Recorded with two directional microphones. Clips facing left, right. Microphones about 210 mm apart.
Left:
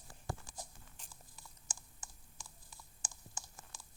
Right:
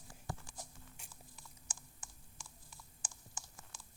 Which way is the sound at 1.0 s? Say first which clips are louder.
Even; 10° right (ahead or behind).